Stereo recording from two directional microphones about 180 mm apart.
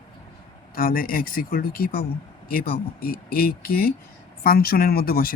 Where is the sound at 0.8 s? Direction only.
50° left (ahead or behind).